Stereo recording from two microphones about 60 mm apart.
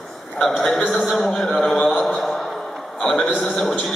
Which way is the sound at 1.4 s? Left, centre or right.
Centre.